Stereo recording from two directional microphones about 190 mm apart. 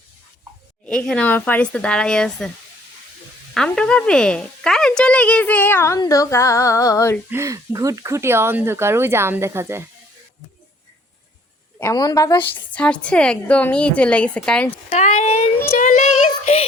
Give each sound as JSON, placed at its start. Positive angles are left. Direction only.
{"t": 0.9, "sound": "a woman's voice", "side_deg": 5}
{"t": 3.5, "sound": "a woman's voice", "side_deg": 5}
{"t": 7.3, "sound": "speech", "side_deg": -15}
{"t": 11.8, "sound": "a woman's voice", "side_deg": 20}
{"t": 12.5, "sound": "a woman's voice", "side_deg": 5}
{"t": 14.8, "sound": "a child's voice", "side_deg": 40}
{"t": 15.7, "sound": "speech", "side_deg": 45}